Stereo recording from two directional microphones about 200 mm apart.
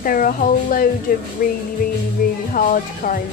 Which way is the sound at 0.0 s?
45° left (ahead or behind).